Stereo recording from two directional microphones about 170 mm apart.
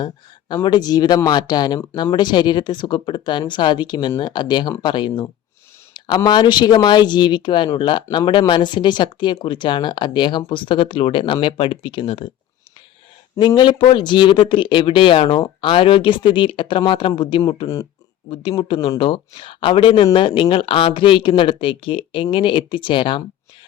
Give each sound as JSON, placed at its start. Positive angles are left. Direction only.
{"t": 0.0, "sound": "speech", "side_deg": 25}
{"t": 13.4, "sound": "speech", "side_deg": 30}